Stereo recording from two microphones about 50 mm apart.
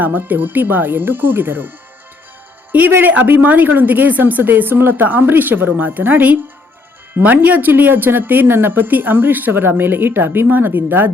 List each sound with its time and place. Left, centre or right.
0.0 s speech: right
3.0 s speech: right